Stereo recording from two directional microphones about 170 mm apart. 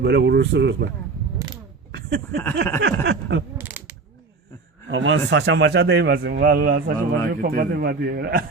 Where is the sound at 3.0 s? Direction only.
90° right.